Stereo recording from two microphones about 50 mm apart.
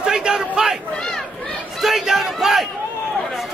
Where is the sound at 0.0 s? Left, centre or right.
Centre.